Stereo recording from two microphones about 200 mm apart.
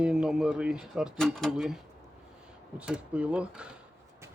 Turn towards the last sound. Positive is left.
turn(degrees=-5)  # may be behind; listen again after turning